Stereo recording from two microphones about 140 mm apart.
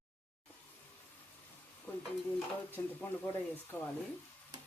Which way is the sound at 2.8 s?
20° left (ahead or behind).